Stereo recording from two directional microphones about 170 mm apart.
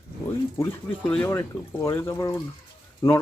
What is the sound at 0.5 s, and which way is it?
Speech, 15° left (ahead or behind).